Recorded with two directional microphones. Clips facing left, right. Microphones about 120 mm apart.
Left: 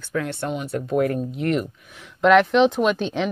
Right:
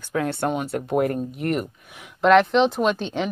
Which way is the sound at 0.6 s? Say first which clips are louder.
Left 1 dB; 65° right (ahead or behind).